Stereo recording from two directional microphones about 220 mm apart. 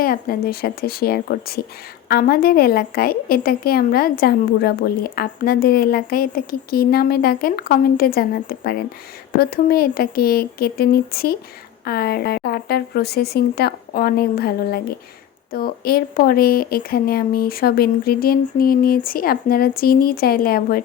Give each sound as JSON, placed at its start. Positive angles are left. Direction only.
{"t": 0.0, "sound": "a woman's voice", "side_deg": 40}